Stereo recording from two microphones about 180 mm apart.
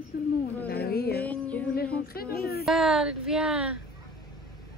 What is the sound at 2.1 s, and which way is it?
Speech, 60° left (ahead or behind).